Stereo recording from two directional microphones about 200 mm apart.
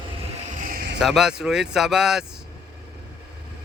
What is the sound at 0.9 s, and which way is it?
Speech, centre (ahead or behind).